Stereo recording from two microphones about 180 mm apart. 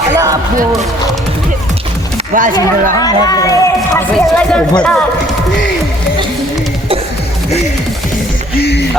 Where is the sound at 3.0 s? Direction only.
20° left (ahead or behind).